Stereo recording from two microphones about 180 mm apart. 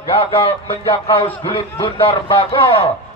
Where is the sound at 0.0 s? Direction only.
30° left (ahead or behind).